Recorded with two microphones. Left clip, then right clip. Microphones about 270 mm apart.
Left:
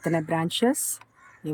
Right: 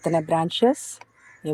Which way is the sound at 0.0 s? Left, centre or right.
Centre.